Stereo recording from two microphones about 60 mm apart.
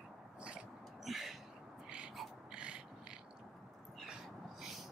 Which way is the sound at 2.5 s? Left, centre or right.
Centre.